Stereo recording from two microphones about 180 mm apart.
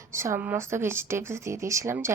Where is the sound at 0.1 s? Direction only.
15° right (ahead or behind).